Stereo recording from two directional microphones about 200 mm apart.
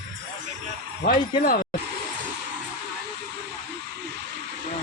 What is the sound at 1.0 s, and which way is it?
Speech, 45° left (ahead or behind).